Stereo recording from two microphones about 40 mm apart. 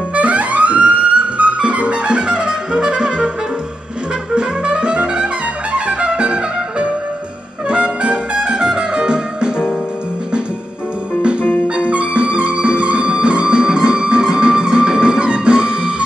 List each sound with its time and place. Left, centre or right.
0.1 s music: right; by 3.3 s centre
4.4 s music: right
11.6 s music: right